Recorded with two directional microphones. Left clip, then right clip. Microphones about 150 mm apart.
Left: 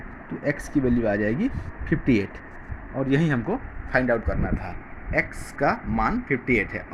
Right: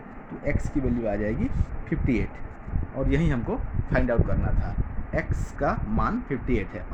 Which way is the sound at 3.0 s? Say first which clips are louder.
Left 3 dB; 25° left (ahead or behind).